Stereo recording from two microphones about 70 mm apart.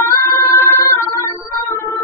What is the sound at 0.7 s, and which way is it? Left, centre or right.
Organ, left.